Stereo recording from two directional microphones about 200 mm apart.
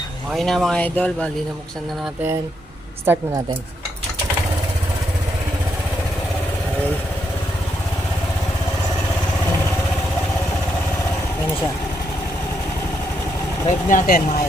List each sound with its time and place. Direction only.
0.3 s speech: centre (ahead or behind)
13.7 s speech: 40° left (ahead or behind)